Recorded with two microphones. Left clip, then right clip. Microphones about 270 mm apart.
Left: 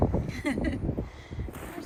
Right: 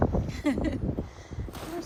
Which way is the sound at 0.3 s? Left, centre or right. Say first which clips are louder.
Right 2 dB; centre.